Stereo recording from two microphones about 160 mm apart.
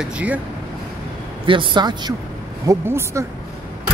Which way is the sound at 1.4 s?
30° right (ahead or behind).